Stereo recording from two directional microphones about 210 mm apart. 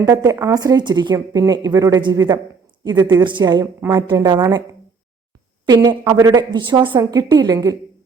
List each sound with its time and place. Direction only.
0.0 s a woman's voice: 15° right (ahead or behind)
5.6 s a woman's voice: 20° right (ahead or behind)